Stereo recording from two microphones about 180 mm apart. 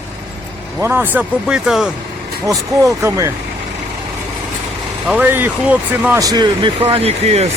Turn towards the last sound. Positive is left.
turn(degrees=-35)  # may be behind; listen again after turning